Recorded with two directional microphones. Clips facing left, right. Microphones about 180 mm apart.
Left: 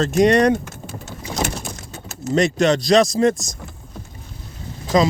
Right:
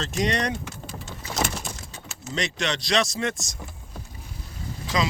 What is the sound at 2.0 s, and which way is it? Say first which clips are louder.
Speech: left 12 dB; 45° left (ahead or behind).